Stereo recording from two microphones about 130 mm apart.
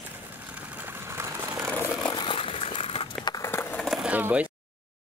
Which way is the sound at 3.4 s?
20° left (ahead or behind).